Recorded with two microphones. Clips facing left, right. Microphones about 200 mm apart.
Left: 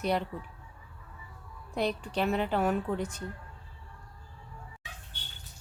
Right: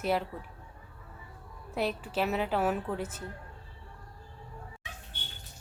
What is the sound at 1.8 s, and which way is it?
A woman's voice, 5° right (ahead or behind).